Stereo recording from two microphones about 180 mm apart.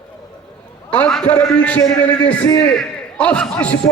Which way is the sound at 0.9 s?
5° left (ahead or behind).